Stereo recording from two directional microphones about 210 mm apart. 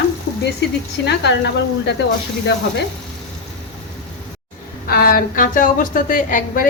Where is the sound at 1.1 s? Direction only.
55° left (ahead or behind).